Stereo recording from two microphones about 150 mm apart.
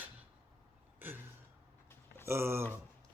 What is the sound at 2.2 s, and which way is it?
Speech, 15° right (ahead or behind).